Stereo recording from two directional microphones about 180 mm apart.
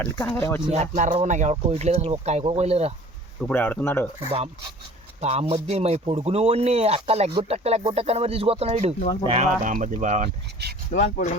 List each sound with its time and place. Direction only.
0.0 s speech: 10° left (ahead or behind)
0.7 s speech: 40° right (ahead or behind)
3.5 s speech: 10° left (ahead or behind)
5.2 s speech: 35° right (ahead or behind)
9.6 s speech: 45° right (ahead or behind)
10.2 s speech: 65° right (ahead or behind)
11.0 s speech: 40° left (ahead or behind)